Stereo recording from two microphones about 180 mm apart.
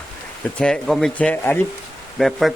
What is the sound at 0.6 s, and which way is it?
Speech, 5° left (ahead or behind).